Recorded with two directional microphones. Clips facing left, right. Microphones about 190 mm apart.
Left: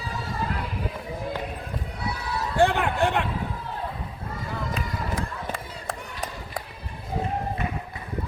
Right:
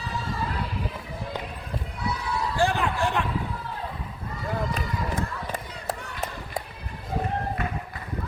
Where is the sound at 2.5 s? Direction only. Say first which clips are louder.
Left 4 dB; 60° left (ahead or behind).